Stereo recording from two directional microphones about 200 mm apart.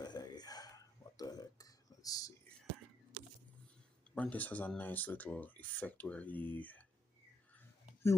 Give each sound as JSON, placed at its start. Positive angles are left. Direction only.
{"t": 0.0, "sound": "burping", "side_deg": 20}
{"t": 1.1, "sound": "a sound", "side_deg": 20}
{"t": 4.1, "sound": "speech", "side_deg": 5}